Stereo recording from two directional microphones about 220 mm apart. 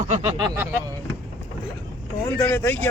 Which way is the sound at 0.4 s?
10° right (ahead or behind).